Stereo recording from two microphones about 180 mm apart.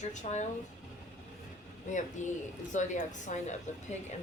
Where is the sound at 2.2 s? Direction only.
40° left (ahead or behind).